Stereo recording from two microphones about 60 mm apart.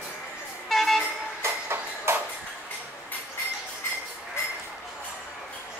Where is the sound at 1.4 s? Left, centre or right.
Right.